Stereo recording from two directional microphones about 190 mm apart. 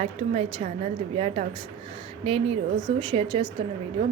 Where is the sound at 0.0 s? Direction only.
35° right (ahead or behind).